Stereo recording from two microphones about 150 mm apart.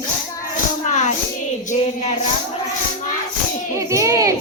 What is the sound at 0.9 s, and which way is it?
Hands, 55° left (ahead or behind).